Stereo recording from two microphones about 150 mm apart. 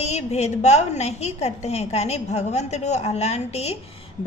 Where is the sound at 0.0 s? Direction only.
45° left (ahead or behind).